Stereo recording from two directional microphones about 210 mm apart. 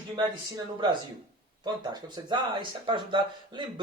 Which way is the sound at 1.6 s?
20° right (ahead or behind).